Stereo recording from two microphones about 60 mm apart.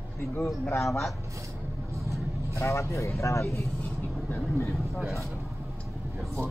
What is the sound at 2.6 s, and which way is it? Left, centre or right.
Speech, left.